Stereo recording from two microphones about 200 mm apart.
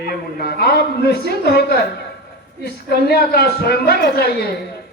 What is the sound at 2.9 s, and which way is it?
A man's voice, 55° left (ahead or behind).